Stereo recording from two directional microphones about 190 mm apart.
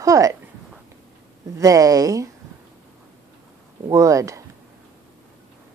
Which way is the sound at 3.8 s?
15° right (ahead or behind).